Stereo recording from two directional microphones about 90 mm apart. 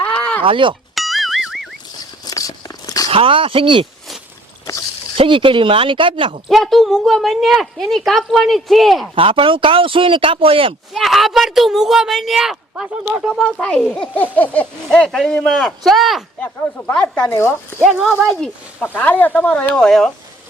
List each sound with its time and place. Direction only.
0.0 s a sound: 15° left (ahead or behind)
0.4 s speech: 70° right (ahead or behind)
0.9 s music: centre (ahead or behind)
2.2 s a sound: 45° left (ahead or behind)
3.1 s speech: 85° right
5.1 s speech: 85° right
6.5 s speech: 5° left (ahead or behind)
9.1 s speech: 90° right
10.9 s speech: centre (ahead or behind)
13.3 s speech: 10° left (ahead or behind)
17.2 s speech: 30° left (ahead or behind)
18.3 s speech: 10° left (ahead or behind)